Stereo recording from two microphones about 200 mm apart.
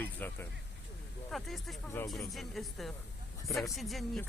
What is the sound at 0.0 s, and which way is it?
Speech, 10° left (ahead or behind).